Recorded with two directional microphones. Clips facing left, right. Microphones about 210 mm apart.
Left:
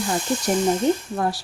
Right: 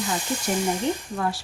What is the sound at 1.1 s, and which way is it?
Speech, 40° left (ahead or behind).